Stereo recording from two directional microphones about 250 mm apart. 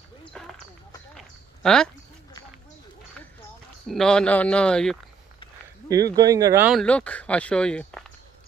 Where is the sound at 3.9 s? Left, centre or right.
Centre.